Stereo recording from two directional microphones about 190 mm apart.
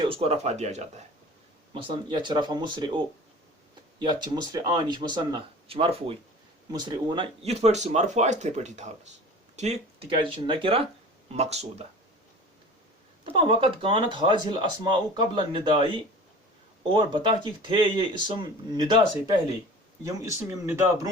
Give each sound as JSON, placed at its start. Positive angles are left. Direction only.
{"t": 0.1, "sound": "speech", "side_deg": -30}
{"t": 4.0, "sound": "speech", "side_deg": -20}
{"t": 13.2, "sound": "speech", "side_deg": -30}
{"t": 16.9, "sound": "speech", "side_deg": -25}